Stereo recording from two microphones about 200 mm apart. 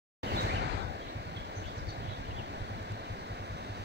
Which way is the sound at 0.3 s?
55° right (ahead or behind).